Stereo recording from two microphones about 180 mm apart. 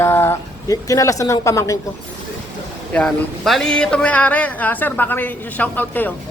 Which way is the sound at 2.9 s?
5° left (ahead or behind).